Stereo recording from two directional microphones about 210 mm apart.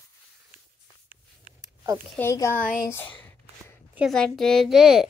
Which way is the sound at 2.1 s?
10° left (ahead or behind).